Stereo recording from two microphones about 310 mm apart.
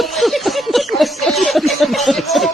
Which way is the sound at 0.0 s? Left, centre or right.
Centre.